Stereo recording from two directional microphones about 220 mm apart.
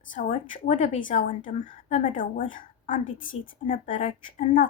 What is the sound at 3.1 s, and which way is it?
Speech, 60° left (ahead or behind).